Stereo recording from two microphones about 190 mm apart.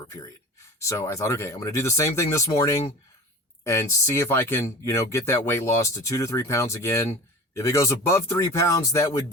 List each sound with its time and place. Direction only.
0.8 s speech: 15° left (ahead or behind)